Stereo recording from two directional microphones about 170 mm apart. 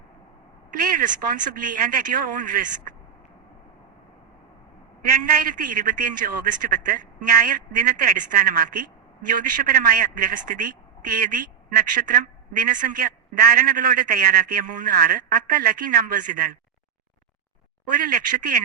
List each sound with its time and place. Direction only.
0.7 s speech: 55° right (ahead or behind)
5.0 s a man's voice: 55° right (ahead or behind)
18.0 s a man's voice: 55° right (ahead or behind)